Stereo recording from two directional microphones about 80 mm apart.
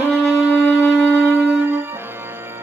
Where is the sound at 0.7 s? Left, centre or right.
Centre.